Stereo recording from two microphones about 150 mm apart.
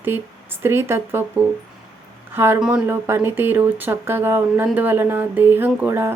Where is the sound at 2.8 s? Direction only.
15° right (ahead or behind).